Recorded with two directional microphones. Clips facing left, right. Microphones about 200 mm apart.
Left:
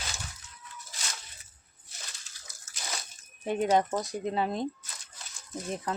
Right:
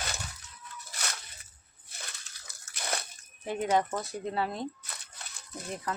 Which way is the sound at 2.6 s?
60° right (ahead or behind).